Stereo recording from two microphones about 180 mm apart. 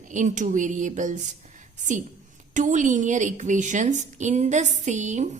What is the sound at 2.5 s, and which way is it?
A woman's voice, 45° right (ahead or behind).